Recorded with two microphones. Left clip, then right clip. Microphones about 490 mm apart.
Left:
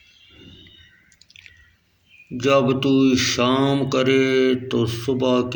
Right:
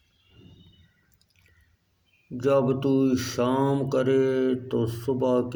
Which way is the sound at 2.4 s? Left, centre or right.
Right.